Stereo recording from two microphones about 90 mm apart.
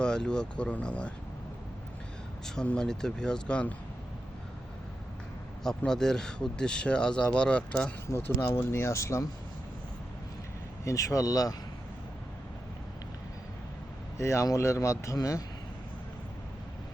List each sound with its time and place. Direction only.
0.0 s speech: 10° left (ahead or behind)
2.6 s speech: 10° left (ahead or behind)
5.6 s speech: 5° left (ahead or behind)
8.0 s speech: 30° left (ahead or behind)
10.8 s speech: 35° left (ahead or behind)
14.2 s speech: 35° left (ahead or behind)